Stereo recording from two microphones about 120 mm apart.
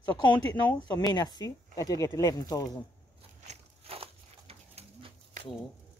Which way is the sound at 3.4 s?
55° right (ahead or behind).